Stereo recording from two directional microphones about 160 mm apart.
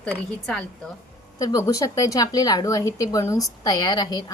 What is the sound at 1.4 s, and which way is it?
A woman's voice, 20° left (ahead or behind).